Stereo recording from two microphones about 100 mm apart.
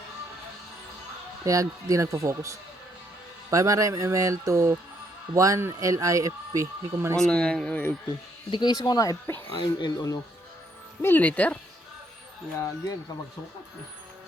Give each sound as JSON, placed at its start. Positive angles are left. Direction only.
{"t": 1.5, "sound": "speech", "side_deg": -35}
{"t": 7.2, "sound": "speech", "side_deg": 10}
{"t": 8.4, "sound": "speech", "side_deg": 50}
{"t": 9.5, "sound": "speech", "side_deg": 55}
{"t": 11.0, "sound": "speech", "side_deg": 20}
{"t": 12.5, "sound": "speech", "side_deg": 35}